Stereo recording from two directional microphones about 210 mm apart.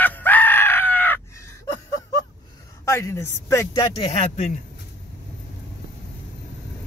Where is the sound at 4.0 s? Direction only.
25° left (ahead or behind).